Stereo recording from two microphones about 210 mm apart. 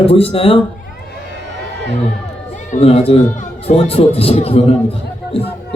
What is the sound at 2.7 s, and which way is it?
Speech, 30° left (ahead or behind).